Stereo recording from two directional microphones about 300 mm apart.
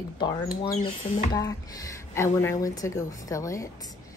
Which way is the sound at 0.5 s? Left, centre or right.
Left.